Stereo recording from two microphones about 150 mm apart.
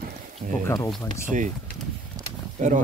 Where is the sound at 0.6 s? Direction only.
20° left (ahead or behind).